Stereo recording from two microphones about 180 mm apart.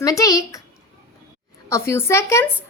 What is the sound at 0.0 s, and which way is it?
Speech, 20° left (ahead or behind).